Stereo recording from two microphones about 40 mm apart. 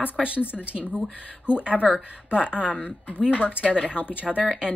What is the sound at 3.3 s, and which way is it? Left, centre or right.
Speech, left.